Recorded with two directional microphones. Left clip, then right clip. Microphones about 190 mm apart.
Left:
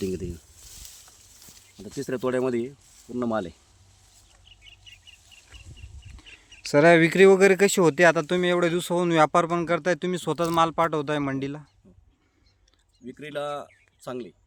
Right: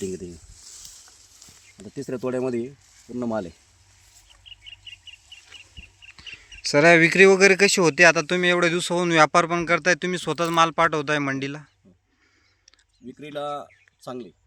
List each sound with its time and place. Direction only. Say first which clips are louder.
1.8 s speech: left 1 dB; 20° right (ahead or behind)
6.7 s speech: right 2 dB; 5° left (ahead or behind)
13.1 s speech: right 1 dB; 5° left (ahead or behind)